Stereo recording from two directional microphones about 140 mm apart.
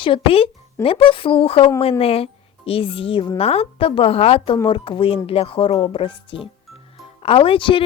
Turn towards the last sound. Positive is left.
turn(degrees=35)  # may be behind; listen again after turning